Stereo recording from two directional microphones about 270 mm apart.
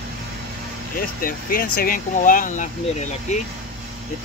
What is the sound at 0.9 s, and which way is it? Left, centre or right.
Speech, left.